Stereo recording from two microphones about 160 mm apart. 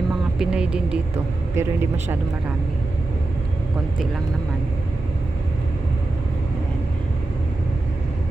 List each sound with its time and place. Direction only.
0.3 s speech: 5° right (ahead or behind)